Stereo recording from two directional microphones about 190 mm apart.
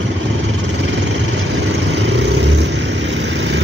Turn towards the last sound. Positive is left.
turn(degrees=-65)  # may be behind; listen again after turning